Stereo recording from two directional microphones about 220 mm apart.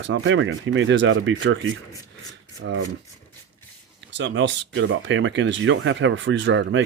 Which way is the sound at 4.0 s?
55° right (ahead or behind).